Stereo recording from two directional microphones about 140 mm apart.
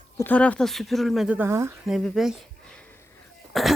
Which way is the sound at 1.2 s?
15° right (ahead or behind).